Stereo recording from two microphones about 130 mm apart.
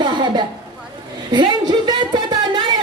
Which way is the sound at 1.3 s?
35° right (ahead or behind).